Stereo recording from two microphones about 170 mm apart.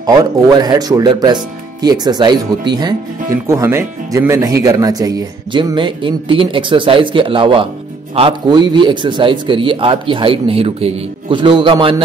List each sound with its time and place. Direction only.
0.0 s speech: 25° right (ahead or behind)